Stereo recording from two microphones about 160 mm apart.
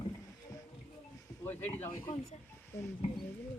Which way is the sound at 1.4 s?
15° left (ahead or behind).